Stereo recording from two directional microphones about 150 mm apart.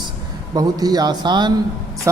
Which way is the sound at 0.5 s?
25° right (ahead or behind).